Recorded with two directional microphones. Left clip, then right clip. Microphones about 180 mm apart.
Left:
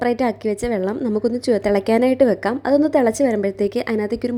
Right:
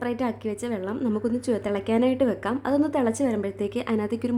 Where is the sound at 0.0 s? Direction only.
30° left (ahead or behind).